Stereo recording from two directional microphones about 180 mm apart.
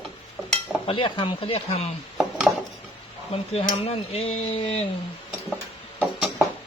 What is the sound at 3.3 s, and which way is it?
Speech, 35° left (ahead or behind).